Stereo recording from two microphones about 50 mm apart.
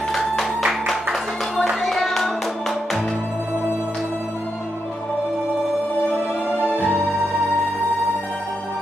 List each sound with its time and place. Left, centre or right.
0.1 s music: centre
0.6 s music: centre
6.6 s music: right